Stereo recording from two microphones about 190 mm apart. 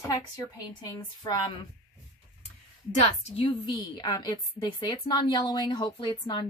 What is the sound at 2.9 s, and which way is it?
A woman's voice, 30° left (ahead or behind).